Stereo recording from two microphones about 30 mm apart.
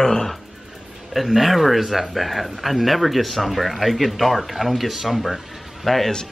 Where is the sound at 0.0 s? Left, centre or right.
Centre.